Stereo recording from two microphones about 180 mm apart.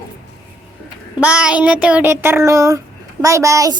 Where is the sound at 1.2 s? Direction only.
5° right (ahead or behind).